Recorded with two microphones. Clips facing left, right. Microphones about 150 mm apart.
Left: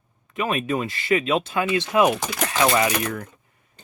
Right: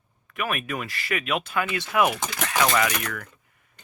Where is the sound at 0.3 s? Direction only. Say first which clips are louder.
Left 5 dB; 25° left (ahead or behind).